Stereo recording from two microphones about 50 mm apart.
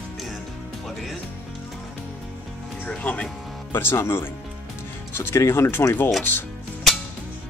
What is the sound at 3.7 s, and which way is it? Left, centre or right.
Speech, left.